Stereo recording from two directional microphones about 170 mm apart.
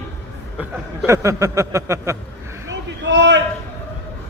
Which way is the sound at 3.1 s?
90° right.